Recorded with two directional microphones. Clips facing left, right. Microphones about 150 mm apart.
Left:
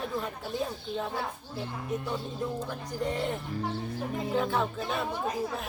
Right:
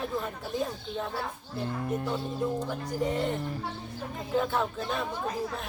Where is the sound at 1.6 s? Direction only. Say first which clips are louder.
Right 3 dB; 50° right (ahead or behind).